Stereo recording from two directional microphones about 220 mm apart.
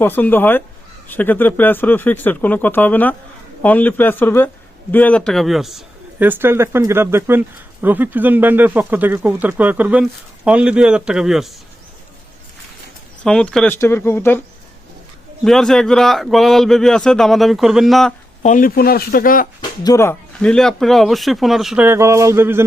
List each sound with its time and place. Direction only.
0.0 s speech: 10° left (ahead or behind)
13.2 s speech: 5° left (ahead or behind)
15.4 s speech: centre (ahead or behind)
18.4 s speech: 40° left (ahead or behind)
19.8 s speech: 15° left (ahead or behind); by 22.6 s 10° right (ahead or behind)